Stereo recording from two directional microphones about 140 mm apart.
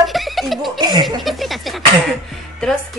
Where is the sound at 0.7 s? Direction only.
30° right (ahead or behind).